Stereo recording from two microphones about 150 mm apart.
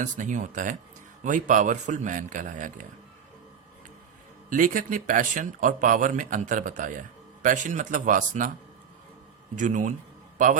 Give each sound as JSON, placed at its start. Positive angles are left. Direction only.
{"t": 0.0, "sound": "speech", "side_deg": -55}
{"t": 4.4, "sound": "speech", "side_deg": -65}
{"t": 9.6, "sound": "a man's voice", "side_deg": -55}